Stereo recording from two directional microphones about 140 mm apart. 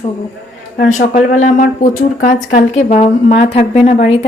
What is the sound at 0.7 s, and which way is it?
Speech, 65° left (ahead or behind).